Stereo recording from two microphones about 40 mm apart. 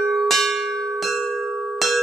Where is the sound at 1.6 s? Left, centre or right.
Centre.